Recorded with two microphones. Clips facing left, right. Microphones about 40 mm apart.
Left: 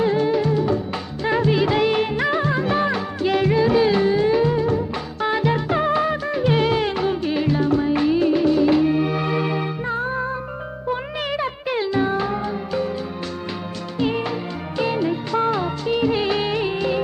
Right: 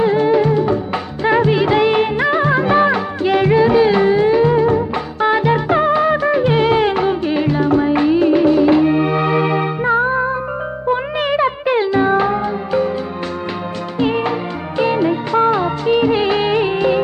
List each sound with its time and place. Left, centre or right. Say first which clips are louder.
0.0 s music: right 6 dB; right
4.5 s music: right 7 dB; right
5.2 s music: right 6 dB; centre
14.0 s music: right 5 dB; right
14.8 s music of bollywood: right 6 dB; right